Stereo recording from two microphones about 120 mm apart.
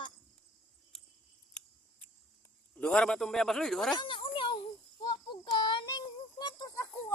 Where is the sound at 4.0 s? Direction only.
45° left (ahead or behind).